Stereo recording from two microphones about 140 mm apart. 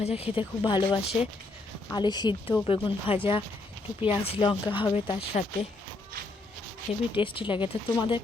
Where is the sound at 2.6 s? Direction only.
40° left (ahead or behind).